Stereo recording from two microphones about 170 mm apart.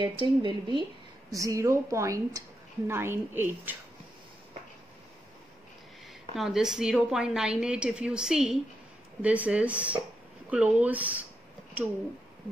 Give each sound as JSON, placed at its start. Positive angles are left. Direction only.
{"t": 0.0, "sound": "speech", "side_deg": -30}
{"t": 1.3, "sound": "a woman's voice", "side_deg": -20}
{"t": 6.3, "sound": "a woman's voice", "side_deg": 0}